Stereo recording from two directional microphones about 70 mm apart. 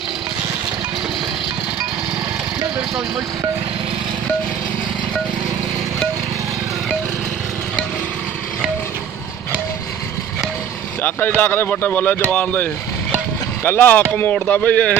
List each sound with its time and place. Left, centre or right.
11.0 s speech: left
13.7 s speech: left
14.3 s a sound: centre